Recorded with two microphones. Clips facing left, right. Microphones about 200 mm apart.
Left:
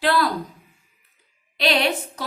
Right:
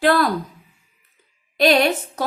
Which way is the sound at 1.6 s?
45° right (ahead or behind).